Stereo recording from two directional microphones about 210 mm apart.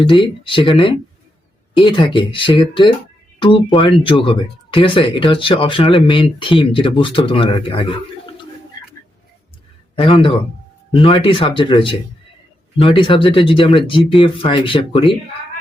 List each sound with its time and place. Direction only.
0.0 s speech: 25° left (ahead or behind)
1.8 s speech: 25° left (ahead or behind)
9.9 s a man's voice: 25° left (ahead or behind)